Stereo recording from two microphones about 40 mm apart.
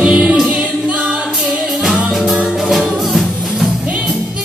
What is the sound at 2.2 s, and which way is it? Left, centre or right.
Music, centre.